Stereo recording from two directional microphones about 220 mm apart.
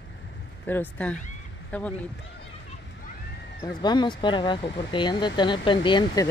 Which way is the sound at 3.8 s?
20° left (ahead or behind).